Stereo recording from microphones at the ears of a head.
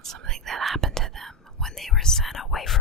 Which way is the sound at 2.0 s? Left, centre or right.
Left.